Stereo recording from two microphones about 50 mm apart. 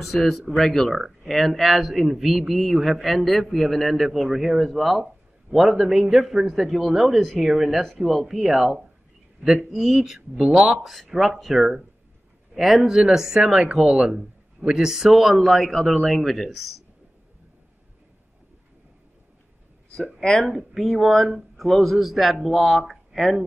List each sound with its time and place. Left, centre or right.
0.0 s a man's voice: centre
10.8 s a man's voice: centre
20.2 s speech: centre
20.5 s a man's voice: centre
21.3 s speech: centre
21.6 s a man's voice: centre